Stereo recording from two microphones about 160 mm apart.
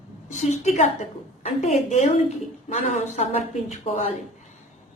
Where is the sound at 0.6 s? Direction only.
45° left (ahead or behind).